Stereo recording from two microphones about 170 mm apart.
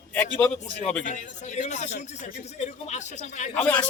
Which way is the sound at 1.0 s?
45° left (ahead or behind).